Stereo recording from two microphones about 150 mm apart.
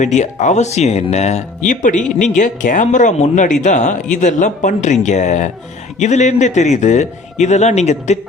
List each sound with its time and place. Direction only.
0.0 s speech: 55° left (ahead or behind)